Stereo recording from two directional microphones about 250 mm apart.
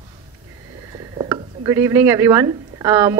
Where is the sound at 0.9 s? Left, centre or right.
Centre.